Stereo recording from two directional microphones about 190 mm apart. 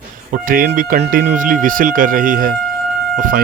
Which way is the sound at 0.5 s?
45° right (ahead or behind).